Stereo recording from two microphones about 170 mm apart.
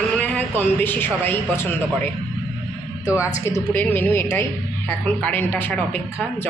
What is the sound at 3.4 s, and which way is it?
A woman's voice, 15° left (ahead or behind).